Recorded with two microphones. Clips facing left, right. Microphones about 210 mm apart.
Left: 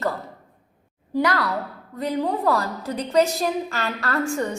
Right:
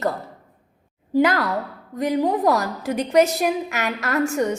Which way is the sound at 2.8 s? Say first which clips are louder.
Right 4 dB; 80° right.